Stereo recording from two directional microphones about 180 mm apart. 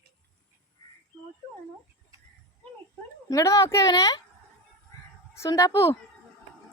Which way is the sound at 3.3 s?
20° left (ahead or behind).